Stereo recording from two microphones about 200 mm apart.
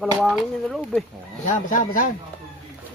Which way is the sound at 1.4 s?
40° left (ahead or behind).